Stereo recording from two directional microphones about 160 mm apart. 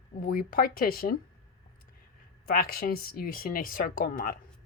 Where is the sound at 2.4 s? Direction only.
65° left (ahead or behind).